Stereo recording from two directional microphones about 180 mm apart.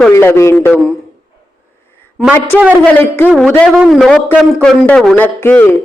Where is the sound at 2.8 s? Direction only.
5° left (ahead or behind).